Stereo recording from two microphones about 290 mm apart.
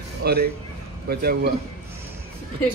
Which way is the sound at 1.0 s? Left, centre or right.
Right.